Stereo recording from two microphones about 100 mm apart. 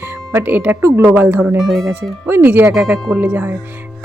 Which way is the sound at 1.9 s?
20° right (ahead or behind).